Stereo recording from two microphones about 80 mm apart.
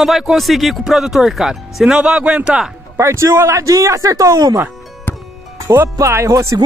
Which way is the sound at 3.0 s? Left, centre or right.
Right.